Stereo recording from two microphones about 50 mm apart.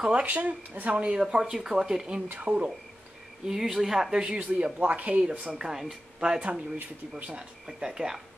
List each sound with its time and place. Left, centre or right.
0.1 s speech: right
1.4 s speech: centre
3.4 s speech: centre
4.4 s speech: right
5.6 s speech: centre
7.6 s speech: centre